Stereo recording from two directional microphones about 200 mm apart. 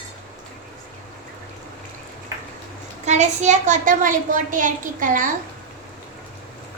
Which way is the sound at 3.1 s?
35° right (ahead or behind).